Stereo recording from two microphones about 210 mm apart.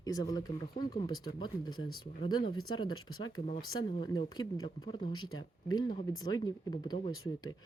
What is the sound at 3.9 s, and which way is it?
Speech, 25° left (ahead or behind).